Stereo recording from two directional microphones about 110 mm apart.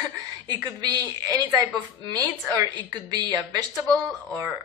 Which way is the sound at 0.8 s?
35° right (ahead or behind).